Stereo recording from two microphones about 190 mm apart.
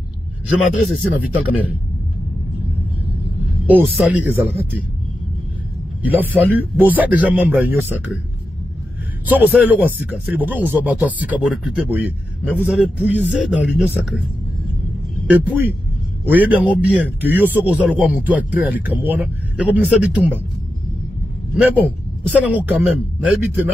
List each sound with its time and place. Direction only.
0.6 s speech: centre (ahead or behind)
3.6 s speech: 10° right (ahead or behind)
6.0 s speech: 10° right (ahead or behind)
9.2 s speech: 10° right (ahead or behind)
15.2 s speech: 10° right (ahead or behind)
21.5 s speech: 10° right (ahead or behind)